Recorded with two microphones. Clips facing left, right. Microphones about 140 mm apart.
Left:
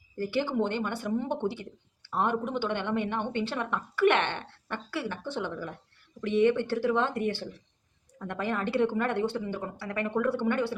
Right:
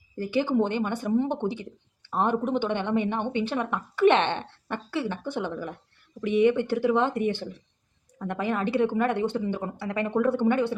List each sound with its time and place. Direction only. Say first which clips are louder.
0.2 s a woman's voice: right 4 dB; 15° right (ahead or behind)